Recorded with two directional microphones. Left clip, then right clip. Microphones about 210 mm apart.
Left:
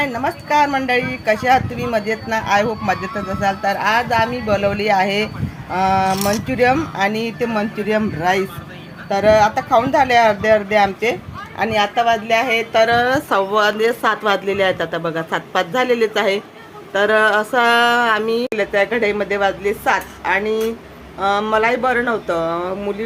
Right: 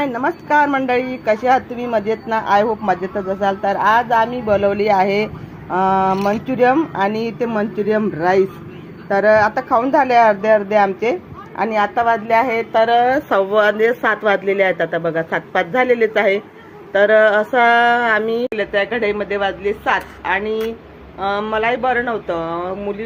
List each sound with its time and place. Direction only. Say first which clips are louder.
0.0 s a woman's voice: right 1 dB; 10° right (ahead or behind)
18.5 s speech: left 1 dB; 15° left (ahead or behind)